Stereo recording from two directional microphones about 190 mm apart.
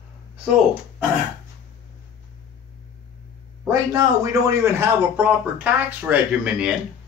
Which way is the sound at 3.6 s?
15° right (ahead or behind).